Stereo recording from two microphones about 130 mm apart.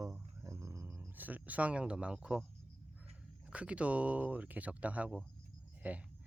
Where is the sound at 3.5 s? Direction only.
10° right (ahead or behind).